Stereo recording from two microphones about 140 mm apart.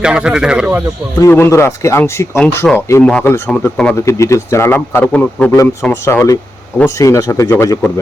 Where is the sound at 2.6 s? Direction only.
Centre (ahead or behind); by 7.8 s 20° left (ahead or behind).